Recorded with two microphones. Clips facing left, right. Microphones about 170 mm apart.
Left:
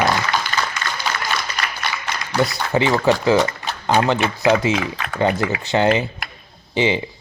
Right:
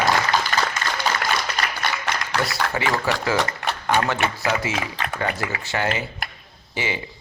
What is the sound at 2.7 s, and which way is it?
A man's voice, 20° left (ahead or behind).